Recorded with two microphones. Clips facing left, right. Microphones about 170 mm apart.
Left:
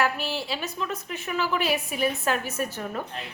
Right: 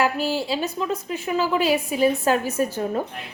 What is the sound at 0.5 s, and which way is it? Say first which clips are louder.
A woman's voice: right 6 dB; 30° right (ahead or behind).